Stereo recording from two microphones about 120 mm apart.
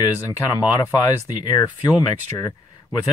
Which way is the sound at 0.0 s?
30° left (ahead or behind).